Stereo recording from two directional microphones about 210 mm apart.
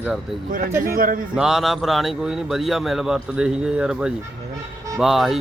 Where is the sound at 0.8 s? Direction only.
45° right (ahead or behind).